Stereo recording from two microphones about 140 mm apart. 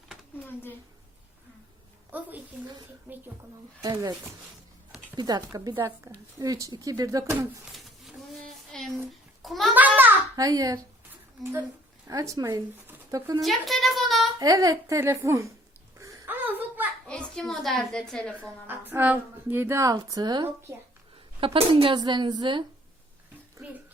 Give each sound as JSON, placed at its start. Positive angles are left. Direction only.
{"t": 3.8, "sound": "a woman's voice", "side_deg": -25}
{"t": 5.1, "sound": "a woman's voice", "side_deg": -30}
{"t": 7.6, "sound": "a sound", "side_deg": 0}
{"t": 9.4, "sound": "a child's voice", "side_deg": 0}
{"t": 10.3, "sound": "a woman's voice", "side_deg": -25}
{"t": 12.0, "sound": "a woman's voice", "side_deg": -20}
{"t": 12.9, "sound": "a sound", "side_deg": -25}
{"t": 13.4, "sound": "a sound", "side_deg": 0}
{"t": 14.3, "sound": "a woman's voice", "side_deg": -25}
{"t": 16.0, "sound": "a sound", "side_deg": -20}
{"t": 17.1, "sound": "a woman's voice", "side_deg": 5}
{"t": 18.3, "sound": "a woman's voice", "side_deg": -15}